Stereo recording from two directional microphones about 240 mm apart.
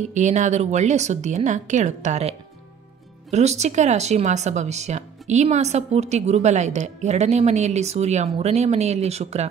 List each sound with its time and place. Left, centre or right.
0.1 s speech: right